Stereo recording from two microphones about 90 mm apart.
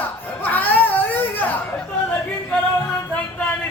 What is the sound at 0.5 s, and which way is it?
Whimper, 20° left (ahead or behind).